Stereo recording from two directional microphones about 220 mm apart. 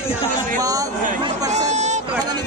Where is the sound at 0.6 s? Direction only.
15° right (ahead or behind).